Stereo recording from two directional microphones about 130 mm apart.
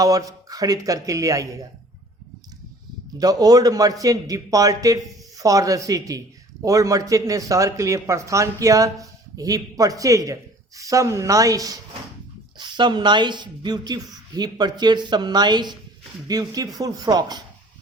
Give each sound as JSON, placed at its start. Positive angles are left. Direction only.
{"t": 0.0, "sound": "speech", "side_deg": -25}
{"t": 3.2, "sound": "a woman's voice", "side_deg": -30}